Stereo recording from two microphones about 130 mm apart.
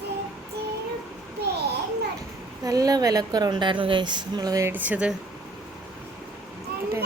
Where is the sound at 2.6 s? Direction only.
25° right (ahead or behind).